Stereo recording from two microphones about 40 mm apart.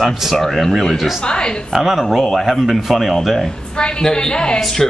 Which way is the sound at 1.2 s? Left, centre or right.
Left.